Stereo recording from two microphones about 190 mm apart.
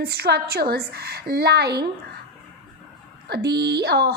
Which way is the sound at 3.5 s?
60° right (ahead or behind).